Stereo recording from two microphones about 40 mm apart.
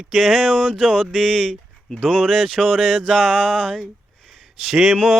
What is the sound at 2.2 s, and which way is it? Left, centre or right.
Music, centre.